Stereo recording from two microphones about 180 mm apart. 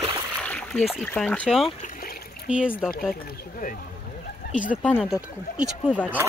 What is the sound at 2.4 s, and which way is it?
Speech, 5° right (ahead or behind).